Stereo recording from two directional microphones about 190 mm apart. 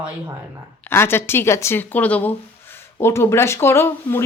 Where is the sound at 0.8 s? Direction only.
10° left (ahead or behind).